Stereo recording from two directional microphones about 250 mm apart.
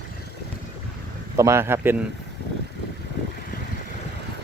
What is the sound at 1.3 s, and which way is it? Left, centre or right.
Speech, centre.